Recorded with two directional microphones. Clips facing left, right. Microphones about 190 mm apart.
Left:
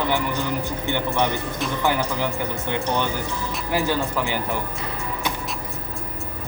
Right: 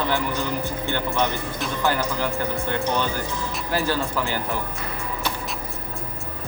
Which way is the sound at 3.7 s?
15° left (ahead or behind).